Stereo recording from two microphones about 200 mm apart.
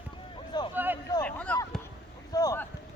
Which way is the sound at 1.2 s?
5° left (ahead or behind).